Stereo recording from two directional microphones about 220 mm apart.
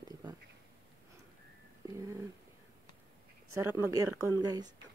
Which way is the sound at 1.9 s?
15° right (ahead or behind).